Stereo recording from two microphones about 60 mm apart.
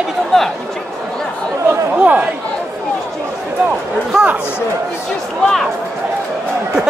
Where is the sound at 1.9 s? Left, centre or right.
Right.